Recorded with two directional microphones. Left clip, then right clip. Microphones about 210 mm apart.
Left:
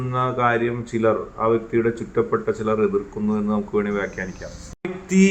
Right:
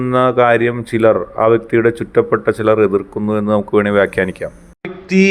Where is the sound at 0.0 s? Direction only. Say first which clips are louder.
Right 9 dB; 50° right (ahead or behind).